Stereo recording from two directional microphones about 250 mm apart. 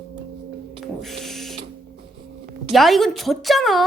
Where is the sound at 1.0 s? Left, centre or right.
Centre.